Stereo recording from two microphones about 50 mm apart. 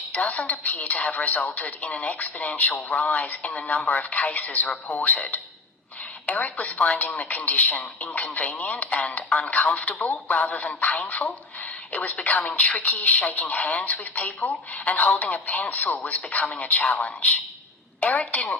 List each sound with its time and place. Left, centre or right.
0.1 s a woman's voice: left